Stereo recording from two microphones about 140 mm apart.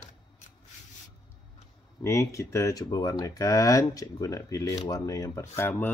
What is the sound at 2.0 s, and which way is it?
Speech, 20° left (ahead or behind).